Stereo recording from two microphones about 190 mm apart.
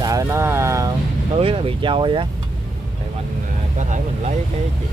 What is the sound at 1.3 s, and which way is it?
Speech, 30° right (ahead or behind).